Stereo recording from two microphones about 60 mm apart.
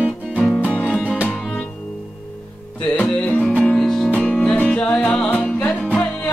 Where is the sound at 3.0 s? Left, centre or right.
Centre.